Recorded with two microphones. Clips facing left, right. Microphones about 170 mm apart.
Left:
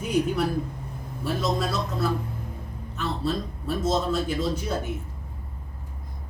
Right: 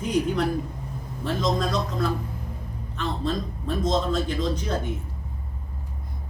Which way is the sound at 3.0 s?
5° left (ahead or behind).